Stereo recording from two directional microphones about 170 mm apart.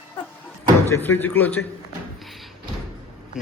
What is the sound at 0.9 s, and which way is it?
Speech, 10° left (ahead or behind).